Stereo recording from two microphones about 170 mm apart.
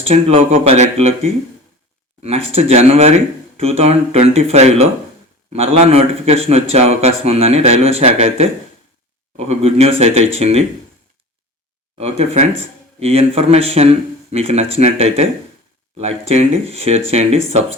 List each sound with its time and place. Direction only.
0.1 s speech: 40° right (ahead or behind)
2.2 s speech: 40° right (ahead or behind)
9.5 s speech: 40° right (ahead or behind)
11.9 s speech: 40° right (ahead or behind)